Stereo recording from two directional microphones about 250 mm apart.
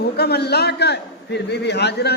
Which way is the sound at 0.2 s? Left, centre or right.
Left.